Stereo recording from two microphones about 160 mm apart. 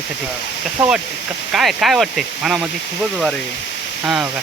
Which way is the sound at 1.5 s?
Centre (ahead or behind).